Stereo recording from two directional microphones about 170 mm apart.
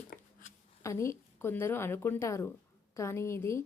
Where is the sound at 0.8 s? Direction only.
15° left (ahead or behind).